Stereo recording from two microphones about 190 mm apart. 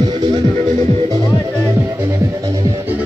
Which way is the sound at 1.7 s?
15° right (ahead or behind).